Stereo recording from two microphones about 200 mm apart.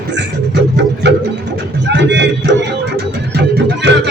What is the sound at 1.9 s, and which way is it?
Speech, 60° right (ahead or behind).